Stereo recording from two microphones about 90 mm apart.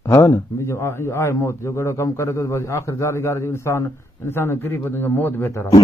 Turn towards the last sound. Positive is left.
turn(degrees=30)  # may be behind; listen again after turning